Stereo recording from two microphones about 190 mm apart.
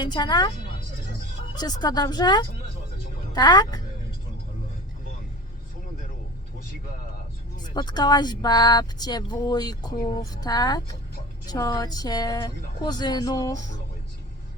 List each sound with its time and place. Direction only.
0.0 s speech: 25° left (ahead or behind)
1.5 s speech: 20° left (ahead or behind)
7.5 s speech: 20° left (ahead or behind)